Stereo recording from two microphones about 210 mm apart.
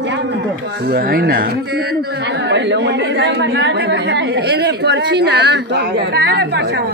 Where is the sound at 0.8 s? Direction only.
45° right (ahead or behind).